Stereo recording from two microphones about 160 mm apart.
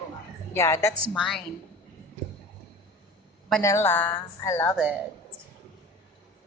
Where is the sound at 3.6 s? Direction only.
15° left (ahead or behind).